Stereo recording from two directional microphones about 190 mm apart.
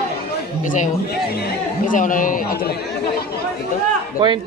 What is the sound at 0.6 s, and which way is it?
Speech, 40° left (ahead or behind).